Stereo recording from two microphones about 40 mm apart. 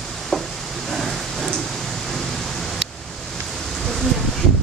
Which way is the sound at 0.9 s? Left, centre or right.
Centre.